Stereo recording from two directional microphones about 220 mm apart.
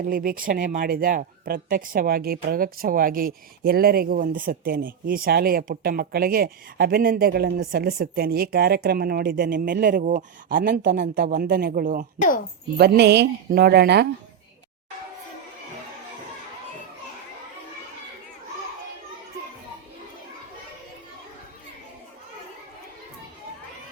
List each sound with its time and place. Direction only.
0.1 s a woman's voice: 40° right (ahead or behind)
12.7 s a woman's voice: 50° right (ahead or behind)